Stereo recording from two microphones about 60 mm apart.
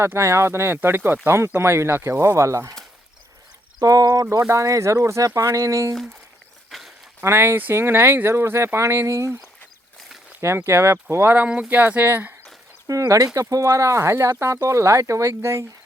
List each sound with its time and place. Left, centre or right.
0.0 s speech: right
3.8 s speech: right
4.4 s speech: right
6.7 s a sound: centre
7.2 s speech: right
10.4 s speech: right
11.3 s speech: right
11.8 s speech: right
12.9 s speech: right
15.4 s speech: right